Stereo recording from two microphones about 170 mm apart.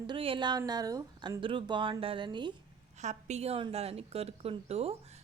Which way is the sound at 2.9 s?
45° right (ahead or behind).